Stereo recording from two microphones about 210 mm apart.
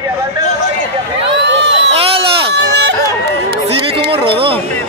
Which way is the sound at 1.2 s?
55° right (ahead or behind).